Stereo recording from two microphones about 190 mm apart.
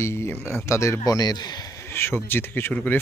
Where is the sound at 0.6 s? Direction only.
15° left (ahead or behind).